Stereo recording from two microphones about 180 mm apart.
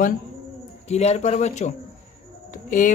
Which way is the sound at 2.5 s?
45° left (ahead or behind).